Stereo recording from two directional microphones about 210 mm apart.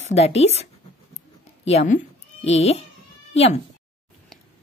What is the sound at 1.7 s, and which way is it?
A child's voice, 35° left (ahead or behind).